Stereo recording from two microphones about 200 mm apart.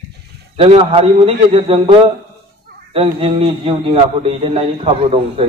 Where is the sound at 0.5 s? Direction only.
30° right (ahead or behind).